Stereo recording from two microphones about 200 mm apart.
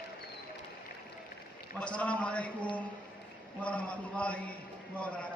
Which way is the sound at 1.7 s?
5° left (ahead or behind).